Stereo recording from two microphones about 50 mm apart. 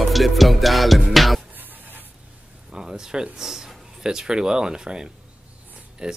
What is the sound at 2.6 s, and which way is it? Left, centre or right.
Speech, centre.